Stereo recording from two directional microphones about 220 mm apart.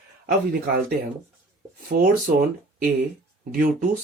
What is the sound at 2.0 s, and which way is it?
Speech, 40° right (ahead or behind).